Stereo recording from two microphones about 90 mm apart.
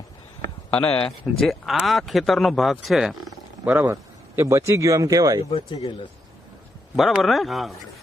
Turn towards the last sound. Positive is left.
turn(degrees=0)  # may be behind; listen again after turning